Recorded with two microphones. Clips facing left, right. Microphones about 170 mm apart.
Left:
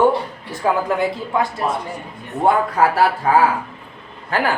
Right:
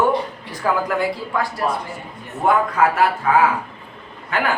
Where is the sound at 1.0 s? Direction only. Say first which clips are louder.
Left 2 dB; 25° left (ahead or behind).